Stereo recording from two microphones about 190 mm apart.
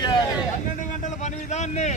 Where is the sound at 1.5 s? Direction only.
35° left (ahead or behind).